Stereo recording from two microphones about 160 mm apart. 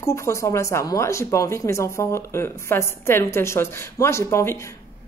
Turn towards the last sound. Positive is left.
turn(degrees=20)  # may be behind; listen again after turning